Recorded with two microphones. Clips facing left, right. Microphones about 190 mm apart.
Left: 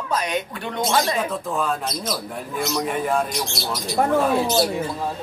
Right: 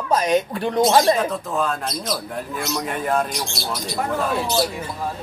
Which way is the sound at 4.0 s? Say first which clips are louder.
Left 6 dB; 45° left (ahead or behind).